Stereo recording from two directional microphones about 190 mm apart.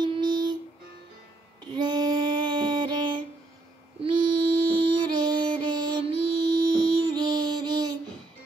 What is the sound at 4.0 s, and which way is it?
Mantra, 25° right (ahead or behind).